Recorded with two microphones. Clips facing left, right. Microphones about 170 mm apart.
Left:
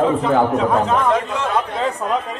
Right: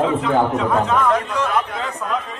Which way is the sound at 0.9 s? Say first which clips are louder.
Left 1 dB; 25° left (ahead or behind).